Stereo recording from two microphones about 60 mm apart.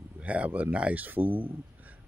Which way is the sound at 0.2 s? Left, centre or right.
Right.